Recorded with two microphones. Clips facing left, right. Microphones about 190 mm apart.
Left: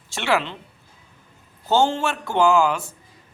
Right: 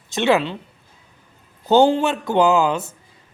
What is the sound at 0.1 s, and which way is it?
Speech, 20° right (ahead or behind).